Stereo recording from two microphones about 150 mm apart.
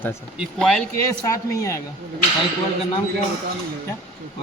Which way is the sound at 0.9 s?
20° left (ahead or behind).